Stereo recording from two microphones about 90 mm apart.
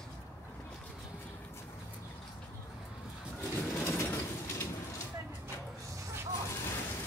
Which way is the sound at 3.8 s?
30° left (ahead or behind).